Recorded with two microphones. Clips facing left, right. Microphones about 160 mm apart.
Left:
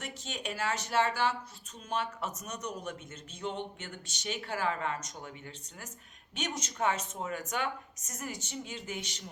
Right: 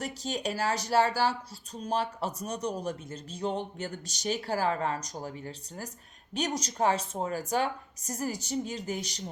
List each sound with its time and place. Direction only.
0.0 s speech: 35° right (ahead or behind)